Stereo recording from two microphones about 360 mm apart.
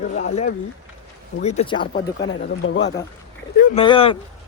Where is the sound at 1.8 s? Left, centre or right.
Left.